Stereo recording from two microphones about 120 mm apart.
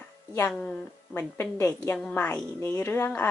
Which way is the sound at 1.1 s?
15° left (ahead or behind).